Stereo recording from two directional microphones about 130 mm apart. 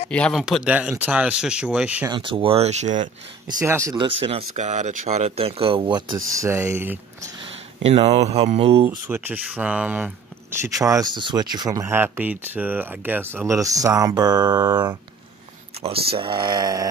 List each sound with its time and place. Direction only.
0.1 s speech: 10° left (ahead or behind)
0.4 s speech: 5° right (ahead or behind)
2.0 s speech: 40° right (ahead or behind); by 3.1 s 65° right (ahead or behind)
3.6 s speech: 20° right (ahead or behind)
3.9 s speech: 45° right (ahead or behind); by 7.2 s 15° right (ahead or behind)
7.3 s speech: 50° right (ahead or behind)
9.0 s speech: 15° right (ahead or behind)
10.6 s speech: 25° right (ahead or behind)
13.5 s speech: 25° right (ahead or behind)
15.8 s speech: 45° right (ahead or behind); by 16.9 s 30° right (ahead or behind)